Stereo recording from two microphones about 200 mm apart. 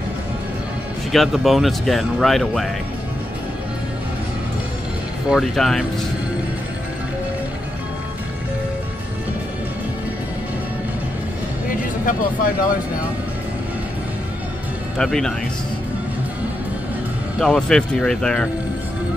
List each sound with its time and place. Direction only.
1.1 s speech: centre (ahead or behind)
5.3 s speech: centre (ahead or behind)
11.7 s a sound: 45° left (ahead or behind)
15.0 s speech: centre (ahead or behind)
17.4 s speech: 5° left (ahead or behind)